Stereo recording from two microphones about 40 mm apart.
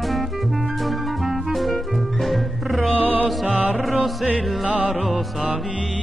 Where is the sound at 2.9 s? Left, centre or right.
Right.